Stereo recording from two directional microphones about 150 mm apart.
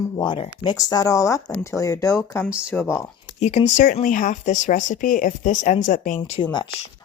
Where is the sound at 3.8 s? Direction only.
65° left (ahead or behind).